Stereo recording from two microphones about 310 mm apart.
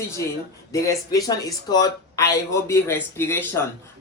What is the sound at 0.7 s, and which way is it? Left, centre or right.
A man's voice, centre.